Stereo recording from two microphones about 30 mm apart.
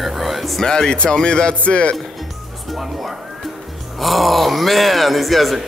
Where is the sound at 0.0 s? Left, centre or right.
Centre.